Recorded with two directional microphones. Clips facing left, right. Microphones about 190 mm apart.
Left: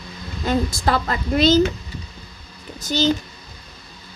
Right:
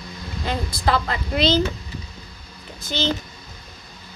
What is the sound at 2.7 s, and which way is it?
Speech, 45° left (ahead or behind).